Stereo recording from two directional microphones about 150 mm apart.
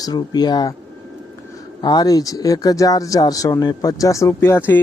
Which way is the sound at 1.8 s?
25° left (ahead or behind).